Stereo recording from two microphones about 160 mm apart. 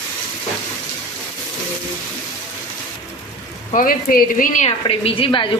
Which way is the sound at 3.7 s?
60° left (ahead or behind).